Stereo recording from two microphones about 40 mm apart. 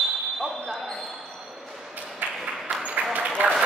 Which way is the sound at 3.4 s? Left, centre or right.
Right.